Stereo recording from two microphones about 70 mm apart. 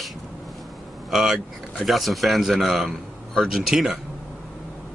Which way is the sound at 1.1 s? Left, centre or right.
Centre.